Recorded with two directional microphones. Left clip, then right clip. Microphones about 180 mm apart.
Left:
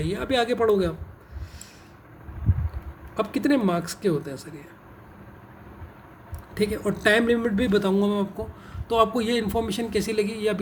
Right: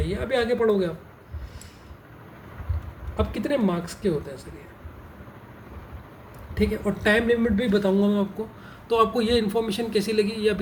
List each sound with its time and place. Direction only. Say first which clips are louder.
0.0 s speech: left 1 dB; 60° left (ahead or behind)
3.2 s speech: left 2 dB; 60° left (ahead or behind)
6.5 s speech: even; 60° left (ahead or behind)
8.9 s a man's voice: right 1 dB; 35° left (ahead or behind)